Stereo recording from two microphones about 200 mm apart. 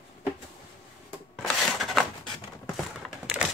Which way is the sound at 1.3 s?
Centre (ahead or behind).